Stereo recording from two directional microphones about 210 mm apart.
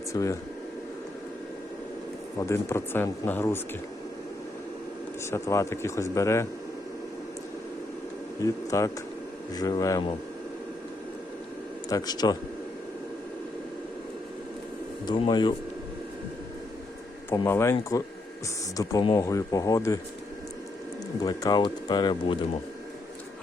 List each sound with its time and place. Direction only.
0.1 s speech: 15° left (ahead or behind)
2.5 s speech: 10° left (ahead or behind)
5.2 s speech: 15° left (ahead or behind)
8.4 s speech: 15° left (ahead or behind)
11.9 s speech: 20° left (ahead or behind)
15.0 s speech: 20° left (ahead or behind)
17.2 s speech: 10° left (ahead or behind)
21.2 s speech: 20° left (ahead or behind)